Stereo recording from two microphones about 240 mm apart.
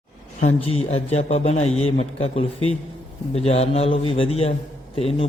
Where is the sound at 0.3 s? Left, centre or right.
Left.